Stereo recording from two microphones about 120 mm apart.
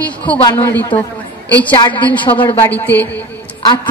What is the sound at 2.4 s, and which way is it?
Speech, 15° left (ahead or behind).